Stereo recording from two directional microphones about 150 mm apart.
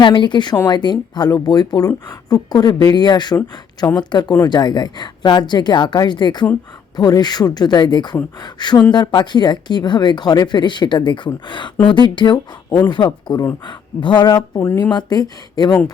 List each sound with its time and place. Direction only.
0.0 s speech: 30° left (ahead or behind)